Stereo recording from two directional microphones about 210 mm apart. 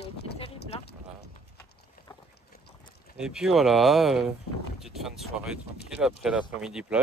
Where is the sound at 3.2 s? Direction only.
5° right (ahead or behind).